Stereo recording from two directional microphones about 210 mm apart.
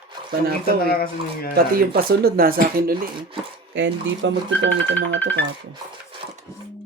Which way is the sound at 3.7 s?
60° right (ahead or behind).